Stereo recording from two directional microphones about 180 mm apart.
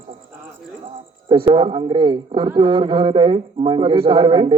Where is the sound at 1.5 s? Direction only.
30° right (ahead or behind).